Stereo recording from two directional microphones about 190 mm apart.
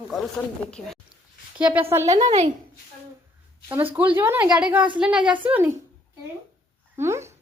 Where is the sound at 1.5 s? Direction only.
5° right (ahead or behind).